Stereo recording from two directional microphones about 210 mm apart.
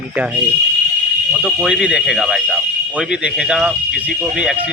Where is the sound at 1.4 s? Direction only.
5° right (ahead or behind).